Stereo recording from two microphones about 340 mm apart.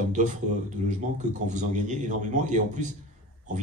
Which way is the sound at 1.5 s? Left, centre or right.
Right.